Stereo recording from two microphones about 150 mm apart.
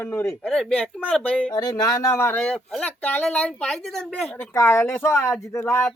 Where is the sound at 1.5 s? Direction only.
25° left (ahead or behind); by 4.5 s 5° left (ahead or behind).